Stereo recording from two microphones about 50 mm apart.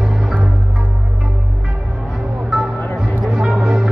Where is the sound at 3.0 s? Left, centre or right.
Centre.